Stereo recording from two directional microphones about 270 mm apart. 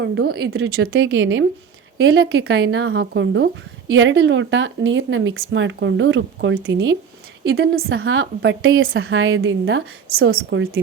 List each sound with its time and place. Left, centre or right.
0.0 s speech: right